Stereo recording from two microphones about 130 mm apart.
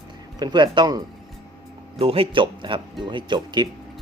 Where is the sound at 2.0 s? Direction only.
45° right (ahead or behind).